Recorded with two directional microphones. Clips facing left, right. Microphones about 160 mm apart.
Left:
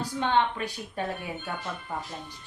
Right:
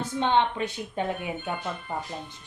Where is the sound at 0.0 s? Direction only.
20° right (ahead or behind).